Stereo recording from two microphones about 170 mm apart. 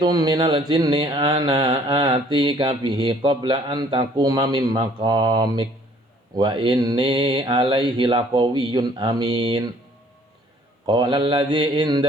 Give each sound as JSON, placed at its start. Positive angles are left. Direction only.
{"t": 0.0, "sound": "mantra", "side_deg": -25}
{"t": 10.8, "sound": "mantra", "side_deg": -25}